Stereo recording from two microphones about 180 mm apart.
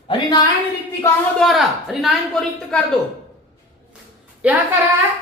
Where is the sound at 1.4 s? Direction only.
Centre (ahead or behind).